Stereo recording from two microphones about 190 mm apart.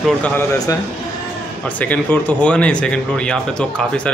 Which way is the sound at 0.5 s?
20° left (ahead or behind).